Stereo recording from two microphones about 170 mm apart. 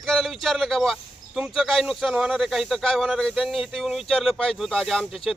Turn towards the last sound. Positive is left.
turn(degrees=0)  # may be behind; listen again after turning